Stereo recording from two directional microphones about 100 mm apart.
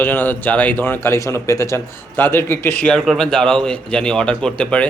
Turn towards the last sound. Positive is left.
turn(degrees=10)  # may be behind; listen again after turning